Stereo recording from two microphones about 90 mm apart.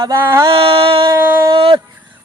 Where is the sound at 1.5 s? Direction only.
70° right (ahead or behind).